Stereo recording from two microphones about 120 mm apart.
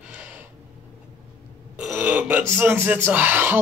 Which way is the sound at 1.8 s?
15° right (ahead or behind).